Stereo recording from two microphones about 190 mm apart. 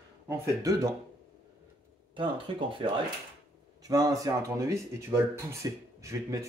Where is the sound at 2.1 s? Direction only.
25° right (ahead or behind).